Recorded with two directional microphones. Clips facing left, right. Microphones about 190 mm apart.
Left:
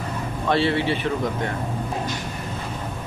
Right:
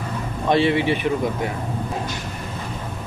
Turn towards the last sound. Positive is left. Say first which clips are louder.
# right 2 dB
turn(degrees=-15)  # may be behind; listen again after turning